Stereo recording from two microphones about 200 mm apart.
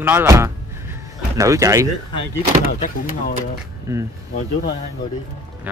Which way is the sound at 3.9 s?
15° right (ahead or behind).